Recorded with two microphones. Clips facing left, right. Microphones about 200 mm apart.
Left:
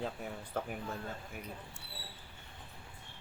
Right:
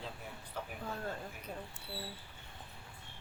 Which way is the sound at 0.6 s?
50° left (ahead or behind).